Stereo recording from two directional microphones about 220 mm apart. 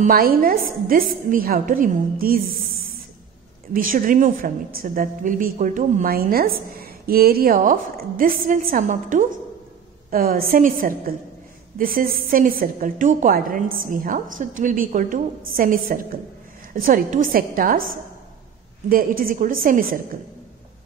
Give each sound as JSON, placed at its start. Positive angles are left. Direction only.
{"t": 0.0, "sound": "a woman's voice", "side_deg": -40}
{"t": 3.7, "sound": "a woman's voice", "side_deg": -40}